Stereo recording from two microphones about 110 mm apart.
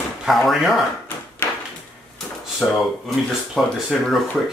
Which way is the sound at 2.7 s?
Centre (ahead or behind).